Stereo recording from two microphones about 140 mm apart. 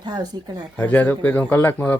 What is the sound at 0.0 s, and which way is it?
Speech, 30° right (ahead or behind).